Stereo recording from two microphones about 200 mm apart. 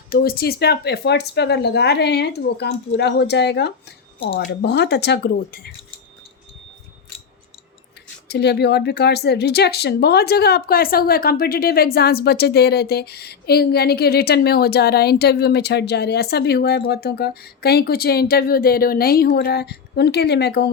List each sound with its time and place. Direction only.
0.1 s speech: 50° left (ahead or behind)
8.3 s a woman's voice: 55° left (ahead or behind)